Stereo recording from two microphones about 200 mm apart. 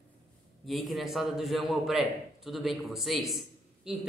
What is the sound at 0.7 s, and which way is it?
Speech, centre (ahead or behind).